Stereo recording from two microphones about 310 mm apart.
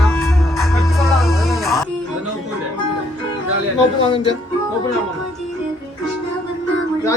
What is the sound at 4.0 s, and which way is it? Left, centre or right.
Speech, centre.